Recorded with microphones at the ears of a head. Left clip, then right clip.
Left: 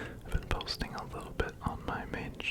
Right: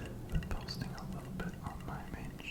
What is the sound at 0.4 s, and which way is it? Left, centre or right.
Whispering, left.